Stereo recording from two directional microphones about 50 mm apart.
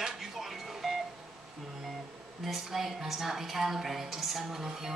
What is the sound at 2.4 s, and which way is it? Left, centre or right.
A woman's voice, centre.